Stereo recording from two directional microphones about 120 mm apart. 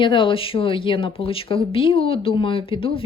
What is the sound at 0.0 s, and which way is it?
Speech, 45° left (ahead or behind).